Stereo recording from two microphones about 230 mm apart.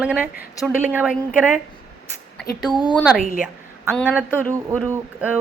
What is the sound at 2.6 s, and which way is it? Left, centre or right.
Speech, centre.